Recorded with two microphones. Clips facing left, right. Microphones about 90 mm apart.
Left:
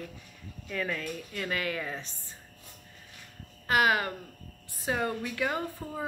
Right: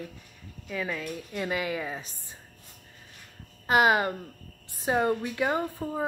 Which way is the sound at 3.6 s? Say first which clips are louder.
Right 3 dB; 25° right (ahead or behind).